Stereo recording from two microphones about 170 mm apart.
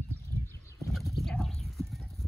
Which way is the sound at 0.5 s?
15° left (ahead or behind).